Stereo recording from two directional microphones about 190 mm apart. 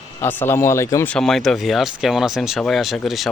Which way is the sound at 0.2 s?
10° left (ahead or behind).